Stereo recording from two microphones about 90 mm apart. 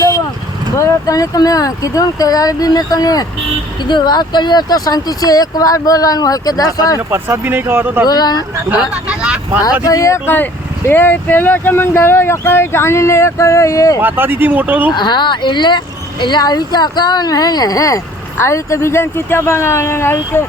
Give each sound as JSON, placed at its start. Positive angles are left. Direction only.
{"t": 0.8, "sound": "speech", "side_deg": 40}
{"t": 3.8, "sound": "speech", "side_deg": 55}
{"t": 7.1, "sound": "speech", "side_deg": -25}
{"t": 8.0, "sound": "speech", "side_deg": 45}
{"t": 8.8, "sound": "vehicle", "side_deg": -10}
{"t": 9.8, "sound": "speech", "side_deg": 40}
{"t": 10.2, "sound": "speech", "side_deg": 20}
{"t": 14.0, "sound": "speech", "side_deg": -20}
{"t": 14.9, "sound": "speech", "side_deg": 55}